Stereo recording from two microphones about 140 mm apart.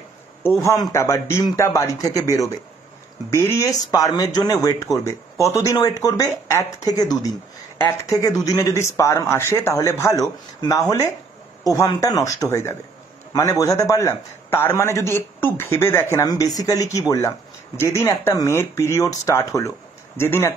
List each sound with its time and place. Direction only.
0.6 s a man's voice: 20° left (ahead or behind)